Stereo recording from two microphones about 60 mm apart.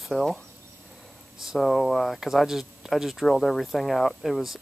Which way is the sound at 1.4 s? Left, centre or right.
Centre.